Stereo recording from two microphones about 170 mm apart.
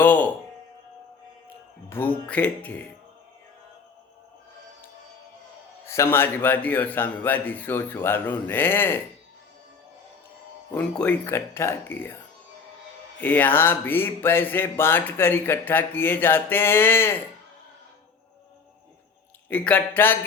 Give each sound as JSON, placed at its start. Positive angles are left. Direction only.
{"t": 0.0, "sound": "speech", "side_deg": 10}
{"t": 1.9, "sound": "speech", "side_deg": 10}
{"t": 5.8, "sound": "speech", "side_deg": 15}
{"t": 10.8, "sound": "speech", "side_deg": 5}
{"t": 13.1, "sound": "speech", "side_deg": 10}
{"t": 19.5, "sound": "speech", "side_deg": 10}